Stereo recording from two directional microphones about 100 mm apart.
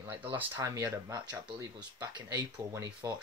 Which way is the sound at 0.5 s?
35° right (ahead or behind).